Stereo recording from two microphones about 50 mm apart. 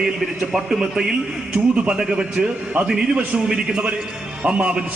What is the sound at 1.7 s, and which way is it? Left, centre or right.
A man's voice, right.